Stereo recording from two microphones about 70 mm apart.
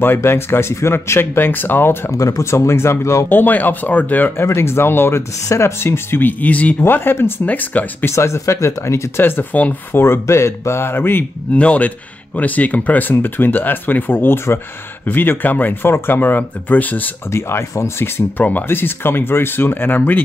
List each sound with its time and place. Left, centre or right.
0.0 s speech: left
2.0 s speech: left
3.3 s speech: left
4.5 s speech: left
6.9 s speech: left
8.1 s speech: left
9.2 s speech: left
10.0 s speech: left
11.5 s speech: centre
17.3 s speech: left
18.4 s speech: left
18.7 s speech: left